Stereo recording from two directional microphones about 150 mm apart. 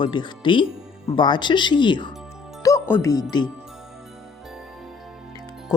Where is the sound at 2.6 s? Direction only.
15° left (ahead or behind).